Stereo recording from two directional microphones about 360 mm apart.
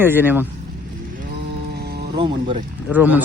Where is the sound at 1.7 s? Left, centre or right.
Right.